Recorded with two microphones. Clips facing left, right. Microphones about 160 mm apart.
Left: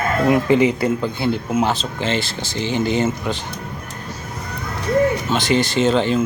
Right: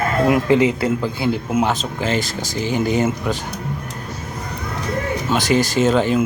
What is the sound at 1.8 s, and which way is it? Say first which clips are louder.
Speech: right 1 dB; 30° left (ahead or behind).